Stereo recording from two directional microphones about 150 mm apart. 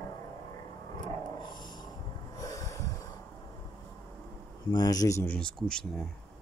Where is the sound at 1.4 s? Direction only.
30° left (ahead or behind).